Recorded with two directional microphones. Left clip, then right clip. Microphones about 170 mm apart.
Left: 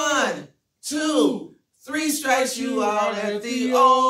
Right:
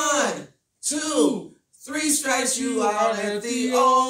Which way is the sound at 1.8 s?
10° left (ahead or behind).